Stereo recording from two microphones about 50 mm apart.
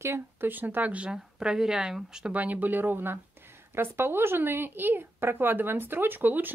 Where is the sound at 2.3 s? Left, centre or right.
Right.